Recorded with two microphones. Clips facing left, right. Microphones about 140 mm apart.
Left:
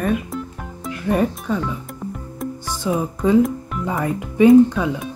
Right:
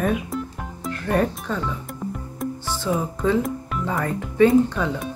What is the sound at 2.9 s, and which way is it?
Speech, 15° left (ahead or behind).